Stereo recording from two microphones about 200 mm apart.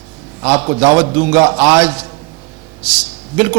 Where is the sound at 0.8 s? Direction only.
15° right (ahead or behind).